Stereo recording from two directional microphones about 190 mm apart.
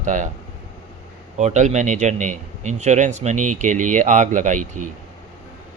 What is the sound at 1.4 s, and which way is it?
Speech, 40° right (ahead or behind).